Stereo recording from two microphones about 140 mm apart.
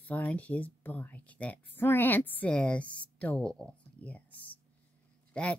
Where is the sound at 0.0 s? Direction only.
10° left (ahead or behind).